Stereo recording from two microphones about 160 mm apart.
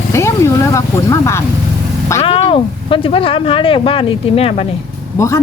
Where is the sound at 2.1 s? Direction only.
35° left (ahead or behind).